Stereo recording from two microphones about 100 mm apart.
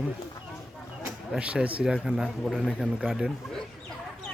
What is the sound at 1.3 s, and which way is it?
A man's voice, 10° right (ahead or behind).